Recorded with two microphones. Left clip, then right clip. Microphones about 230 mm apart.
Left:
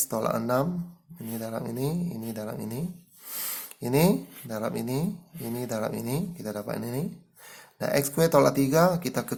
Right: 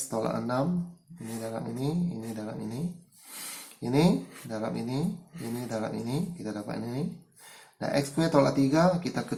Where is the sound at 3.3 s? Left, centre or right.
Left.